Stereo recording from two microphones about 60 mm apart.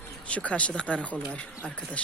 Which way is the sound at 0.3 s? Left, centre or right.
Left.